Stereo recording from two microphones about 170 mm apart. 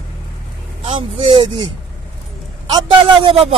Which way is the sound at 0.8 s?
35° right (ahead or behind).